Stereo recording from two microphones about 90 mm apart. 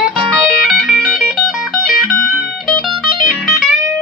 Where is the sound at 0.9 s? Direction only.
5° left (ahead or behind).